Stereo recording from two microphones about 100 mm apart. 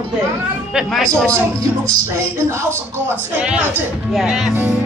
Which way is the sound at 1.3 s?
35° right (ahead or behind).